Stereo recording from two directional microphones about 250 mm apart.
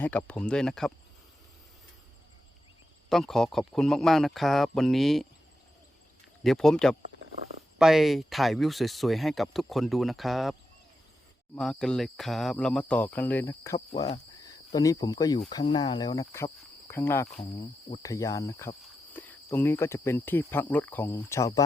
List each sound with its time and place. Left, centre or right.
0.0 s speech: centre
3.1 s speech: centre
6.4 s speech: centre
11.5 s speech: centre
17.6 s speech: left